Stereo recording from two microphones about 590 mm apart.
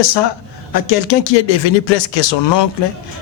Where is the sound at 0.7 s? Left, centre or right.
Left.